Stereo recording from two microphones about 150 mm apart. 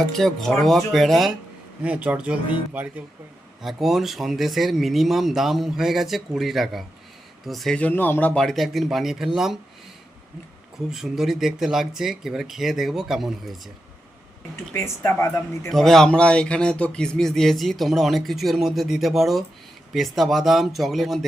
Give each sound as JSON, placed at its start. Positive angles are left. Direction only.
{"t": 0.1, "sound": "speech", "side_deg": 0}
{"t": 10.8, "sound": "speech", "side_deg": -5}
{"t": 14.7, "sound": "speech", "side_deg": 20}
{"t": 15.7, "sound": "speech", "side_deg": 0}